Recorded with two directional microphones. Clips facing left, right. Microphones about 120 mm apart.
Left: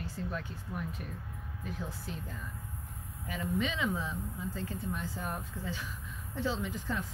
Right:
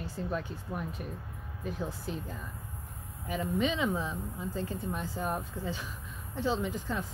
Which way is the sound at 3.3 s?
20° right (ahead or behind).